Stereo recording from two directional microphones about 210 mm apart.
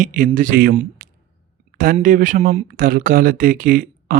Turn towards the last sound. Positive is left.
turn(degrees=-40)  # may be behind; listen again after turning